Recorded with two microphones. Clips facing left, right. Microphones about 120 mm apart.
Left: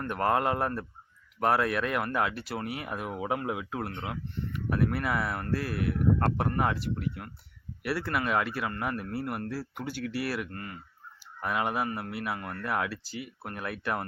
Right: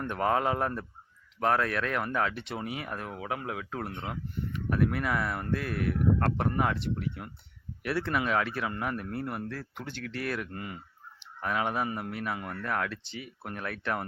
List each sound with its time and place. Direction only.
0.1 s speech: 5° left (ahead or behind)
3.0 s speech: 15° left (ahead or behind)
10.5 s speech: 10° right (ahead or behind)
11.2 s speech: 5° left (ahead or behind)
12.4 s speech: 5° right (ahead or behind)
12.6 s speech: 5° left (ahead or behind)